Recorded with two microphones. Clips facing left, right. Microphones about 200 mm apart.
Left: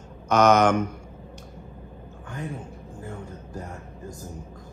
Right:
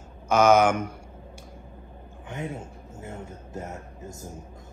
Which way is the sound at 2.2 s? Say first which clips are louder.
Right 1 dB; 25° right (ahead or behind).